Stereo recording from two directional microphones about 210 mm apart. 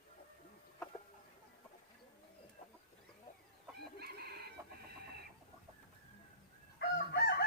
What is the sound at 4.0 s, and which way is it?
Chicken, 50° right (ahead or behind).